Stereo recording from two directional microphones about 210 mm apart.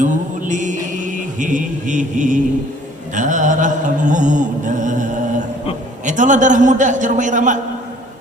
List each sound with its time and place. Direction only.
0.0 s mantra: 35° right (ahead or behind)
3.2 s music: 35° right (ahead or behind)
6.1 s music: 35° right (ahead or behind)